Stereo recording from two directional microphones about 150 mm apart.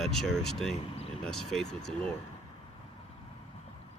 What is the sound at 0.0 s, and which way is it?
Speech, centre (ahead or behind).